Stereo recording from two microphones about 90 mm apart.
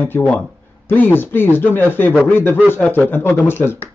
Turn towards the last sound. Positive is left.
turn(degrees=25)  # may be behind; listen again after turning